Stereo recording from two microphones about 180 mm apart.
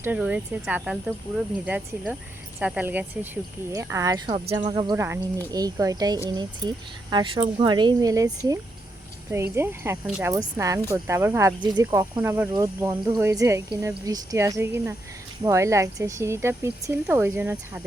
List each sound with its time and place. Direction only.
0.0 s speech: 10° right (ahead or behind); by 4.9 s 25° right (ahead or behind)
4.9 s speech: 15° right (ahead or behind)
9.3 s speech: 15° right (ahead or behind)